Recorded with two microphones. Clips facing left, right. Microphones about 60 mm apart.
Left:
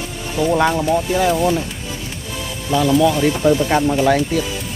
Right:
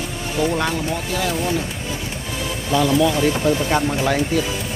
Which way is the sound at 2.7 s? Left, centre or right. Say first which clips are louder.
Left 2 dB; centre.